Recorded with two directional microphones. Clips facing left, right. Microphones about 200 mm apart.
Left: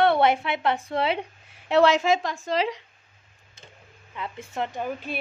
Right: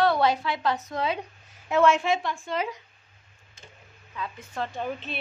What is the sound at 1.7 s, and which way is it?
A woman's voice, 80° left.